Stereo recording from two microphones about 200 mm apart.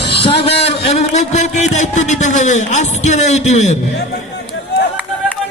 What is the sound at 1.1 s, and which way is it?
A man's voice, 35° left (ahead or behind).